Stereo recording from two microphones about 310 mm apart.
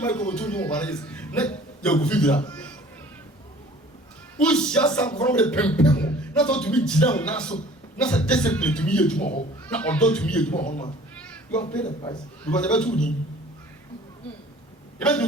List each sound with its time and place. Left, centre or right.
0.0 s a man's voice: centre
4.4 s speech: centre
10.6 s speech: left
12.0 s speech: centre
14.9 s speech: centre